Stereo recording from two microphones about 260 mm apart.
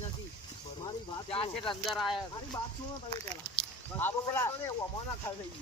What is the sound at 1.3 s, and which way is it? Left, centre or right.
Speech, left.